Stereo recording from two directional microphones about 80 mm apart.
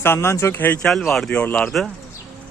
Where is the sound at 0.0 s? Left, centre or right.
Left.